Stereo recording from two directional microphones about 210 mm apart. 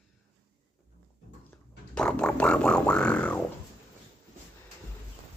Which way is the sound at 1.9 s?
5° left (ahead or behind).